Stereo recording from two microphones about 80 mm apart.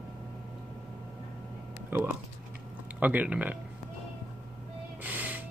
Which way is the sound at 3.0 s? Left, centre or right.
Right.